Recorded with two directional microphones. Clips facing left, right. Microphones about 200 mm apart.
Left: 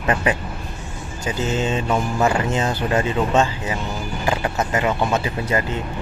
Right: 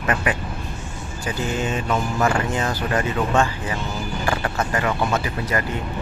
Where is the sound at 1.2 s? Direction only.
20° left (ahead or behind).